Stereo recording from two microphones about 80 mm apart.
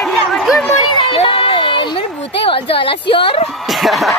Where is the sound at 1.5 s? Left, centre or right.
Left.